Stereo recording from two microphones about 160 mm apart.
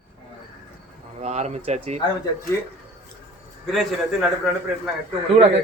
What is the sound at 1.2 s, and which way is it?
Speech, 45° right (ahead or behind).